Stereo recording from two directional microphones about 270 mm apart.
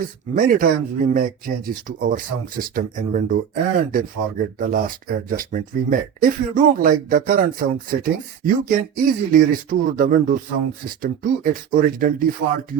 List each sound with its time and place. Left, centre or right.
0.0 s speech: right